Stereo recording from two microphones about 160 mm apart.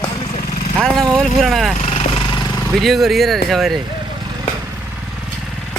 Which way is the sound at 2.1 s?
25° left (ahead or behind).